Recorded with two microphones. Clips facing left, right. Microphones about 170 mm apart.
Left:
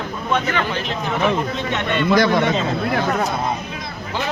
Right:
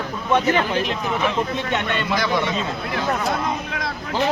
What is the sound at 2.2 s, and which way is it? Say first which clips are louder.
Speech: left 5 dB; 50° left (ahead or behind).